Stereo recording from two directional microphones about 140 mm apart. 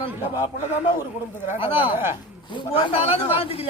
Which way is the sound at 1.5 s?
40° left (ahead or behind).